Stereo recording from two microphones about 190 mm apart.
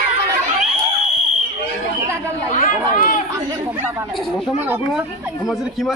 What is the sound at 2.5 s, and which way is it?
Chatter, 45° left (ahead or behind).